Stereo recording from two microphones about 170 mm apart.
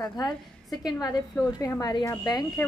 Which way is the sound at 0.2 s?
25° left (ahead or behind).